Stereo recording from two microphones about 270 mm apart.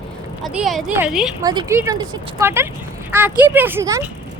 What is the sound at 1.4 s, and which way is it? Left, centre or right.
Speech, centre.